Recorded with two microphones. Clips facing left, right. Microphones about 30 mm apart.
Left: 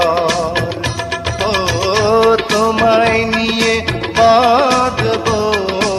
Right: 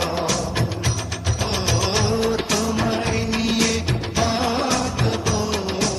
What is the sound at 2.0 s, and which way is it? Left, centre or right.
Music, left.